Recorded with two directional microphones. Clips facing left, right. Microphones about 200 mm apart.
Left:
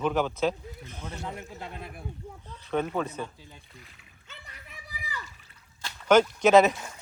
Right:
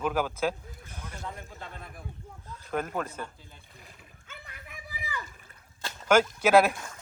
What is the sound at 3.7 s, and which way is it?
Speech, 45° right (ahead or behind).